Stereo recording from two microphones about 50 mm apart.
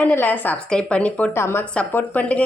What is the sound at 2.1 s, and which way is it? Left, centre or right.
Speech, left.